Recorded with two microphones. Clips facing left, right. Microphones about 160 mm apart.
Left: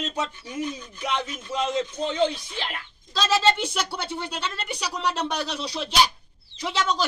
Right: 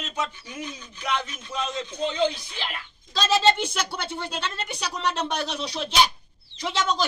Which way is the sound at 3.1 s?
5° left (ahead or behind).